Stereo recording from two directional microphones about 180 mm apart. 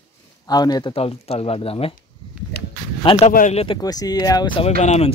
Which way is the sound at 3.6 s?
25° left (ahead or behind).